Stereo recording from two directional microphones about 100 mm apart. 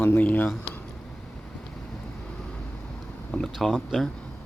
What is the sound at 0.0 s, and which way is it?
Speech, 20° left (ahead or behind).